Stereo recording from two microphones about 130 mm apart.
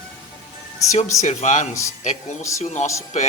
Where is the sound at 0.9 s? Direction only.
65° left (ahead or behind).